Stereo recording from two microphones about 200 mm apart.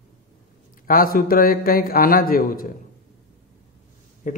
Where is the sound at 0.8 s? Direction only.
45° left (ahead or behind).